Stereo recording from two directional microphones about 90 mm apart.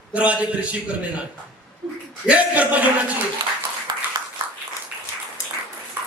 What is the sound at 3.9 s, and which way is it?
Clapping, 50° right (ahead or behind).